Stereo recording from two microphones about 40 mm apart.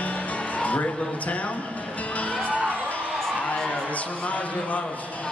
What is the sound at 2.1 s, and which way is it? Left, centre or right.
Music, left.